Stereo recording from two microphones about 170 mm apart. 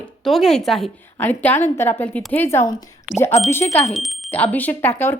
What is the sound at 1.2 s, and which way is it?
Speech, 10° left (ahead or behind).